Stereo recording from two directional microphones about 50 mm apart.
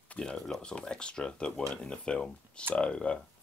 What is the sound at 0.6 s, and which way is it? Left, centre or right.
Speech, centre.